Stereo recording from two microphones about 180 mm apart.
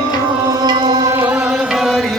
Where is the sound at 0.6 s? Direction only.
25° right (ahead or behind); by 2.0 s centre (ahead or behind).